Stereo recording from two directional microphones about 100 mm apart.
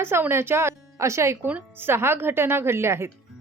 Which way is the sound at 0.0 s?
25° right (ahead or behind).